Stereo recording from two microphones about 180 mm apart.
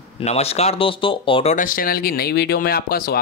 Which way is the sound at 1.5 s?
50° left (ahead or behind).